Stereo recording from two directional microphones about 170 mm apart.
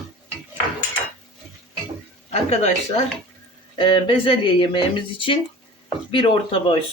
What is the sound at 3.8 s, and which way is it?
Speech, 30° left (ahead or behind).